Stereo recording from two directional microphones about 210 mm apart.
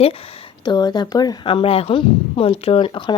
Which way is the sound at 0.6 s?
20° left (ahead or behind).